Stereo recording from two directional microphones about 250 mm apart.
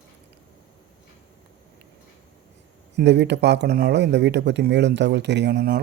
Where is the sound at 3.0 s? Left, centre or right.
Right.